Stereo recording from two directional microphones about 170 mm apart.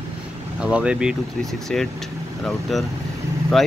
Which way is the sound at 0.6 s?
5° right (ahead or behind).